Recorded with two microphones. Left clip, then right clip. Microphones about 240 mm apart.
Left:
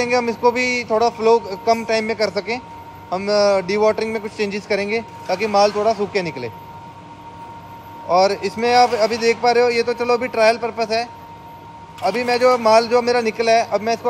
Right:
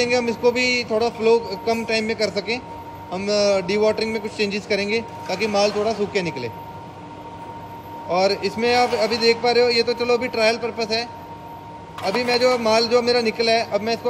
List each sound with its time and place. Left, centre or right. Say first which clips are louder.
0.0 s a man's voice: left 2 dB; left
8.1 s a man's voice: left 4 dB; left
12.1 s a man's voice: left 3 dB; left